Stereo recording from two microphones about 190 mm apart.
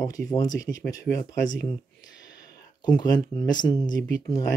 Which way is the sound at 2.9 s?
20° left (ahead or behind).